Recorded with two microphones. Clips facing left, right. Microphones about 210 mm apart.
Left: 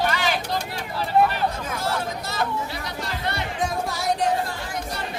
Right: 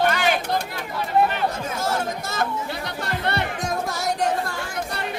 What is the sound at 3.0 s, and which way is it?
Music, 60° right (ahead or behind).